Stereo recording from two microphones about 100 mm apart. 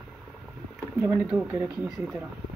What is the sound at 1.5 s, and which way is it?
Speech, 25° right (ahead or behind).